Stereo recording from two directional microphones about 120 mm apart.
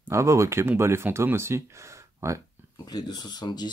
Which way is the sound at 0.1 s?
25° right (ahead or behind).